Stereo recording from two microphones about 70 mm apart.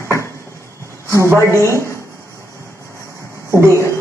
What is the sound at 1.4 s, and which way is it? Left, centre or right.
Speech, left.